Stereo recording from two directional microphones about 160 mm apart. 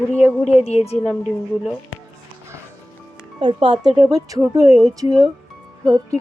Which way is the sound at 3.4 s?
35° right (ahead or behind).